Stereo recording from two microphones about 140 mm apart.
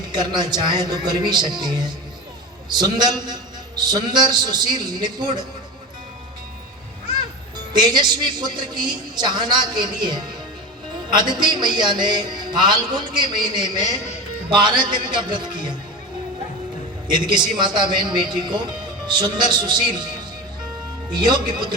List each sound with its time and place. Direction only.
0.1 s a man's voice: 30° right (ahead or behind)
7.7 s a man's voice: 30° right (ahead or behind)
17.1 s a man's voice: 35° right (ahead or behind)
21.1 s a man's voice: 30° right (ahead or behind)